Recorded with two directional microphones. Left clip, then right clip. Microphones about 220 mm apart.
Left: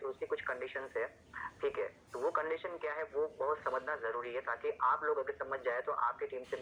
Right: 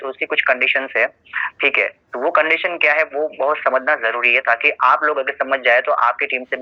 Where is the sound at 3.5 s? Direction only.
50° right (ahead or behind).